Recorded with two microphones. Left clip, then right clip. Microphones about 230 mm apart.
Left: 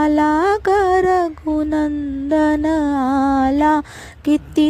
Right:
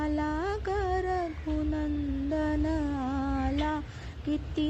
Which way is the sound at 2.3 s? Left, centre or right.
Left.